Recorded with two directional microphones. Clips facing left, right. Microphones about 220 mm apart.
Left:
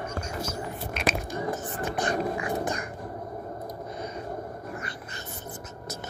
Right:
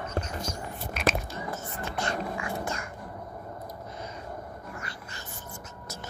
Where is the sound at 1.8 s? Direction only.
15° left (ahead or behind).